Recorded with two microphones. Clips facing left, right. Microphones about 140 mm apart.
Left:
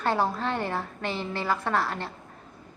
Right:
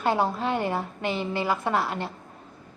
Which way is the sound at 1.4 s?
20° right (ahead or behind).